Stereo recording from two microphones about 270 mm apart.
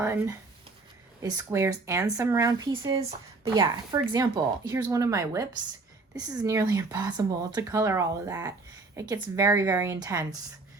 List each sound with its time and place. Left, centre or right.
0.0 s speech: centre